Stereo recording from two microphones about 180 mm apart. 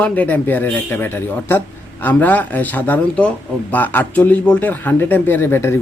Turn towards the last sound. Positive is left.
turn(degrees=15)  # may be behind; listen again after turning